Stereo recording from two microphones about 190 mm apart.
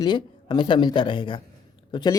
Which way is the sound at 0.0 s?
25° left (ahead or behind).